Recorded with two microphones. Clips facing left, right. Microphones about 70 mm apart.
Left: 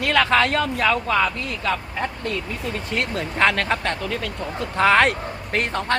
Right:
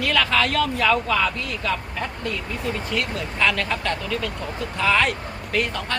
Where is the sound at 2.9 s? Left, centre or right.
Left.